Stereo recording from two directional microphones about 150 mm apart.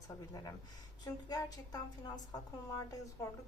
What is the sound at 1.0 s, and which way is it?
A woman's voice, 25° left (ahead or behind).